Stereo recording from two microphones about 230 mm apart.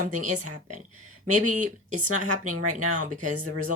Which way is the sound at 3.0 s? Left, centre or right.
Right.